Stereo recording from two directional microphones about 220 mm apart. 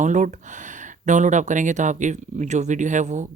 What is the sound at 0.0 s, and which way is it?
Speech, 35° right (ahead or behind).